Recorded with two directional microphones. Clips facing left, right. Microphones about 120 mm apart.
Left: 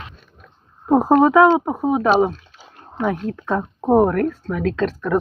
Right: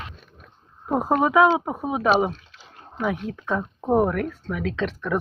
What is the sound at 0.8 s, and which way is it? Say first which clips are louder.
Speech: left 7 dB; 30° left (ahead or behind).